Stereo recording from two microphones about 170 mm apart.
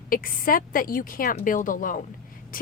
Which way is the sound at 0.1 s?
55° left (ahead or behind).